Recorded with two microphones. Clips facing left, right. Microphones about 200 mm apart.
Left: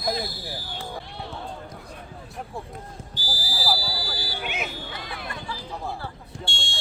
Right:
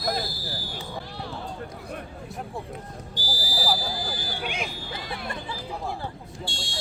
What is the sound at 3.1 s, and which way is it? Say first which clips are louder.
Speech: right 3 dB; 15° right (ahead or behind).